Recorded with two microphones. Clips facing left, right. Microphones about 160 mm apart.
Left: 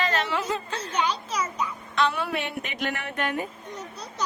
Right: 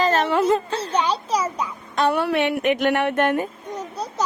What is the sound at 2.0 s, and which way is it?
Music, 65° right (ahead or behind).